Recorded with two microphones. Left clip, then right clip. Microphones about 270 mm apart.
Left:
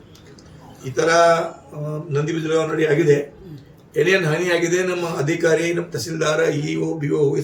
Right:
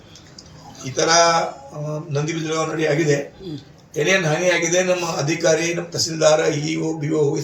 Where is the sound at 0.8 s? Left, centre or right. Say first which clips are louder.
Left 1 dB; centre.